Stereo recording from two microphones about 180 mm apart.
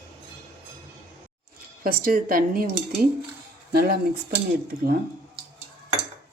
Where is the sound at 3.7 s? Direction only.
60° right (ahead or behind).